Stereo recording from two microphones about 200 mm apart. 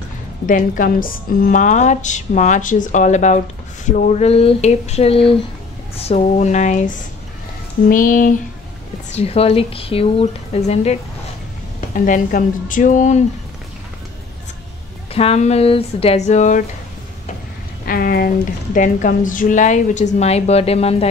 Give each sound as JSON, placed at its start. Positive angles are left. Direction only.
{"t": 0.5, "sound": "speech", "side_deg": 45}
{"t": 7.9, "sound": "a sound", "side_deg": 40}
{"t": 9.1, "sound": "speech", "side_deg": 30}
{"t": 15.1, "sound": "speech", "side_deg": 30}
{"t": 17.8, "sound": "speech", "side_deg": 45}